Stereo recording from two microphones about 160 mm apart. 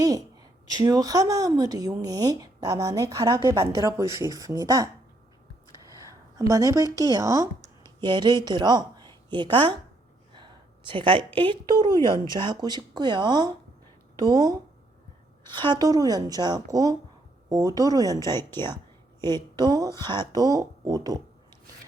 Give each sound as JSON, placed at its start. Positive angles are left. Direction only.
{"t": 0.0, "sound": "a woman's voice", "side_deg": -25}
{"t": 5.9, "sound": "speech", "side_deg": -20}
{"t": 10.3, "sound": "a sound", "side_deg": -30}
{"t": 11.3, "sound": "a woman's voice", "side_deg": -30}